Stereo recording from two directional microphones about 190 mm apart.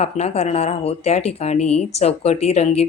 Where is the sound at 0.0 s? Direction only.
35° left (ahead or behind).